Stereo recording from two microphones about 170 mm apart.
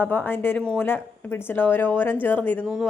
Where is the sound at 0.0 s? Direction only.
10° left (ahead or behind).